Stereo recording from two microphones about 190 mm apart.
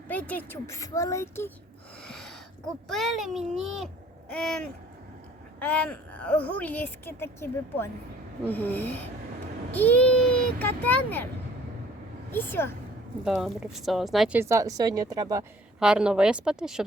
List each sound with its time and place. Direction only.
0.1 s speech: 10° left (ahead or behind)
2.0 s a sound: centre (ahead or behind)
2.9 s speech: centre (ahead or behind)
12.3 s speech: 10° left (ahead or behind)
13.2 s speech: centre (ahead or behind)
14.3 s speech: 15° right (ahead or behind)
15.8 s speech: 5° right (ahead or behind)